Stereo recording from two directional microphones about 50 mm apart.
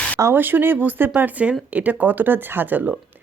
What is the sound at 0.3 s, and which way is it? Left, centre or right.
Speech, right.